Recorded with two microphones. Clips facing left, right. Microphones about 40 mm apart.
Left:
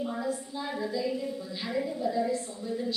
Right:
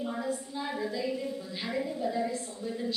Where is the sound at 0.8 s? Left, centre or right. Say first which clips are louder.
Left 3 dB; centre.